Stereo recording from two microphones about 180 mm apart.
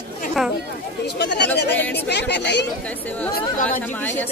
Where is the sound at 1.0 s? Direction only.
70° left (ahead or behind).